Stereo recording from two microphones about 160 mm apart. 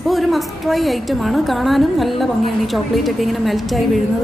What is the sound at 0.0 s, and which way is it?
A woman's voice, centre (ahead or behind).